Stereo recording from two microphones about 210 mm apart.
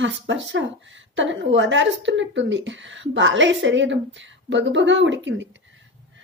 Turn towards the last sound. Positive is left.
turn(degrees=-60)  # may be behind; listen again after turning